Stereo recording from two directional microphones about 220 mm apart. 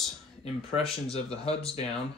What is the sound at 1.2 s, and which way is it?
Speech, 25° left (ahead or behind).